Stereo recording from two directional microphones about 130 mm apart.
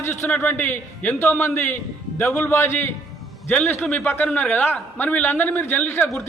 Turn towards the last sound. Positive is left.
turn(degrees=15)  # may be behind; listen again after turning